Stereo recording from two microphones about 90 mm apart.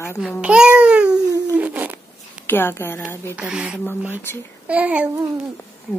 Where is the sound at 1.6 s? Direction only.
15° right (ahead or behind).